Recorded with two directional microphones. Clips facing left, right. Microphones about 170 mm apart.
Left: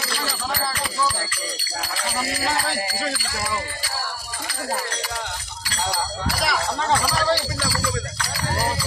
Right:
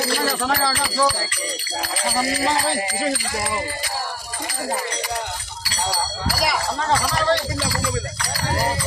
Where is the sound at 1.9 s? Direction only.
25° right (ahead or behind).